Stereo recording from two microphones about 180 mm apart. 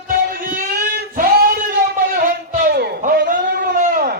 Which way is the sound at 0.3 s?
50° right (ahead or behind).